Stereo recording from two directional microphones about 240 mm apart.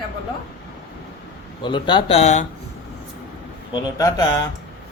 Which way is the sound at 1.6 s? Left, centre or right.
Centre.